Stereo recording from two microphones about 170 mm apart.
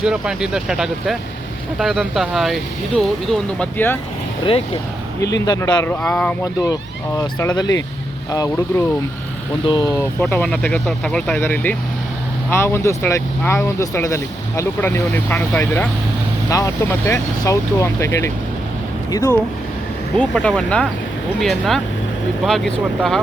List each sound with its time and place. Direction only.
0.0 s speech: 5° right (ahead or behind)
4.4 s speech: 30° left (ahead or behind)
5.2 s a man's voice: 20° left (ahead or behind)
5.8 s a man's voice: 10° left (ahead or behind)
10.2 s speech: 10° left (ahead or behind)